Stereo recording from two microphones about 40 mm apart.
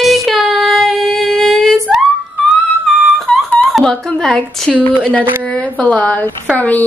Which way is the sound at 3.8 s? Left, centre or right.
Centre.